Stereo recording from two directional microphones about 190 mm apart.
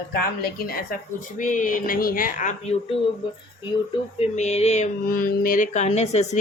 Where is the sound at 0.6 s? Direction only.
50° left (ahead or behind).